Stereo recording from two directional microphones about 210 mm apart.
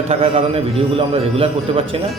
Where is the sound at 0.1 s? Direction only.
25° right (ahead or behind).